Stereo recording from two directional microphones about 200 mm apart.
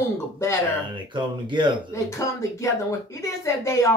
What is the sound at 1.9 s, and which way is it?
A woman's voice, 15° left (ahead or behind).